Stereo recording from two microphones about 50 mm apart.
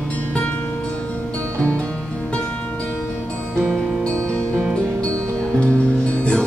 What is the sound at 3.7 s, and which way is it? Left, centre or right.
Music, centre.